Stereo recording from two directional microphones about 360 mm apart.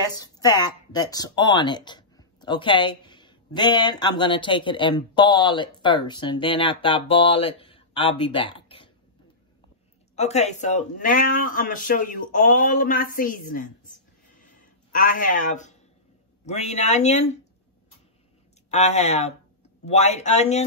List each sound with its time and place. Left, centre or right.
0.1 s speech: centre
10.1 s speech: centre
18.7 s speech: centre